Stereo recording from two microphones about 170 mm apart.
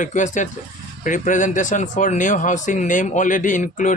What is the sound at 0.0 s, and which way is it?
Speech, 45° left (ahead or behind).